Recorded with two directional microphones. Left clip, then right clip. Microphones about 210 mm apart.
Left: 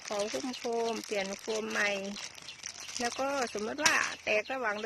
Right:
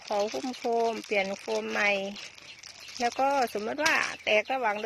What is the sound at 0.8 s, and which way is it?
Speech, 20° right (ahead or behind).